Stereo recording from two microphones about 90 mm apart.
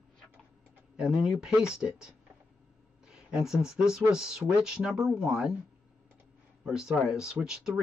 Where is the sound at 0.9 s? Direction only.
5° right (ahead or behind).